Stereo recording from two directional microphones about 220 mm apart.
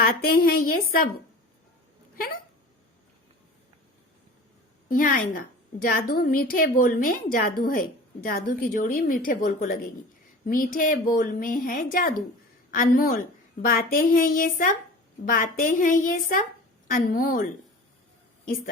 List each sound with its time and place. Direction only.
0.0 s a woman's voice: 40° left (ahead or behind)
2.1 s speech: 40° left (ahead or behind)
4.9 s a woman's voice: 40° left (ahead or behind)
18.4 s a woman's voice: 40° left (ahead or behind)